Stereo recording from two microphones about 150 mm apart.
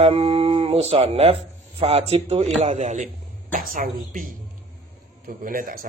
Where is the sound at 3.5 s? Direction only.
65° right (ahead or behind).